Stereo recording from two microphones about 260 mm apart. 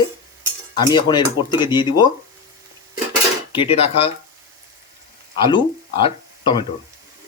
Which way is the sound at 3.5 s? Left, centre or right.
Left.